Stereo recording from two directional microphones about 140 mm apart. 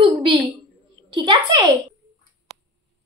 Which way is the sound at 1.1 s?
35° right (ahead or behind).